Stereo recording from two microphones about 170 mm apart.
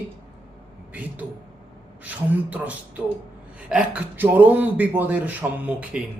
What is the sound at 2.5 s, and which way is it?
A man's voice, 10° right (ahead or behind).